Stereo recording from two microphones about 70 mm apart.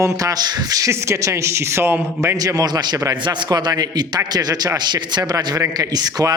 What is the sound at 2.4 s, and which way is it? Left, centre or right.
A man's voice, right.